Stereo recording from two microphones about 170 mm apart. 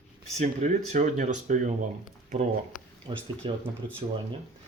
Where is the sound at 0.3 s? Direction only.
45° right (ahead or behind).